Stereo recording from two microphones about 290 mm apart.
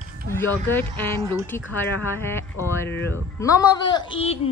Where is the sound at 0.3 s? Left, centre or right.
Centre.